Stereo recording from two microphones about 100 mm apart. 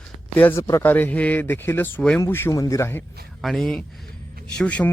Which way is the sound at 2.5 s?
35° left (ahead or behind).